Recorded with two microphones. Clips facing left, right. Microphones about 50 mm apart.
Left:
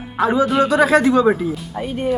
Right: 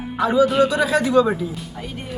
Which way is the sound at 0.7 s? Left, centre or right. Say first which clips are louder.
Left 5 dB; left.